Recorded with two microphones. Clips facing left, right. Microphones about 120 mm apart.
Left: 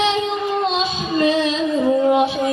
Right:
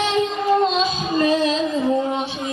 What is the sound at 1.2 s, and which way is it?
Music, 40° right (ahead or behind).